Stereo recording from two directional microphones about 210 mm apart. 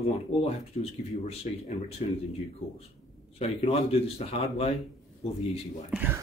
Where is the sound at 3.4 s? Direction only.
30° left (ahead or behind).